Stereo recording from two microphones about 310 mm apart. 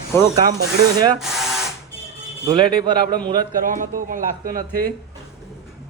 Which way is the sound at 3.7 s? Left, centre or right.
Right.